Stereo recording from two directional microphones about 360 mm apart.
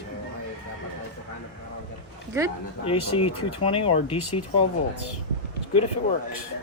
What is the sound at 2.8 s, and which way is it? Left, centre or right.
Speech, centre.